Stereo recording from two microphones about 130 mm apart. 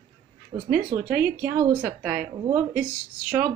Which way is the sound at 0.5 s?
55° right (ahead or behind).